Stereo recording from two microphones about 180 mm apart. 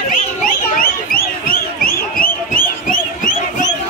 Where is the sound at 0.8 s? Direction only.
55° left (ahead or behind).